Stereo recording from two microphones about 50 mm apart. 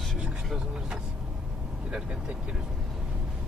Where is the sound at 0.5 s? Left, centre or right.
Centre.